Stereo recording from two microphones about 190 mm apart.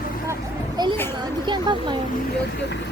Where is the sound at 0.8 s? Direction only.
20° right (ahead or behind).